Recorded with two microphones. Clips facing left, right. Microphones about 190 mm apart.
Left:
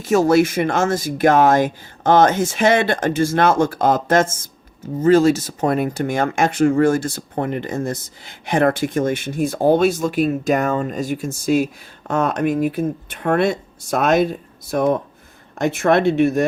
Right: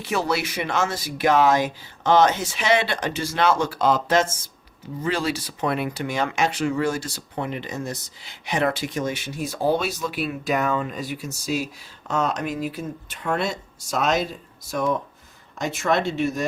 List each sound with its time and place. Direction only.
0.0 s speech: 45° left (ahead or behind)